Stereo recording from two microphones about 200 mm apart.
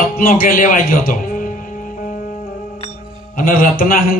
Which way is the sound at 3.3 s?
45° left (ahead or behind).